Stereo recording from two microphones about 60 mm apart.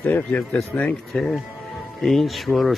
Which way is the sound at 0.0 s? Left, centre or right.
Left.